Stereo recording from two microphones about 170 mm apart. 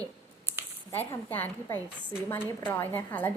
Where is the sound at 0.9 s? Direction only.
15° left (ahead or behind).